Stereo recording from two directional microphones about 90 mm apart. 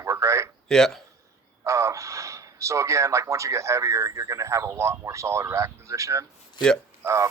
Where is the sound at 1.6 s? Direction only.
35° right (ahead or behind).